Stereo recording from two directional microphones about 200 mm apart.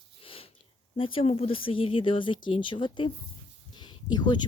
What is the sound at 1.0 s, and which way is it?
Speech, 25° left (ahead or behind).